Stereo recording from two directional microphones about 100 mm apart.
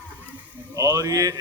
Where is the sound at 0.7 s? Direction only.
35° right (ahead or behind).